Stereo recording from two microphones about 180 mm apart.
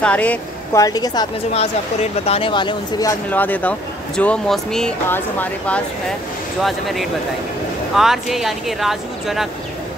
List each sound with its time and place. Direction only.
0.0 s speech: 5° left (ahead or behind)
0.7 s speech: 20° left (ahead or behind)
2.2 s speech: 30° left (ahead or behind)
3.3 s speech: 10° left (ahead or behind)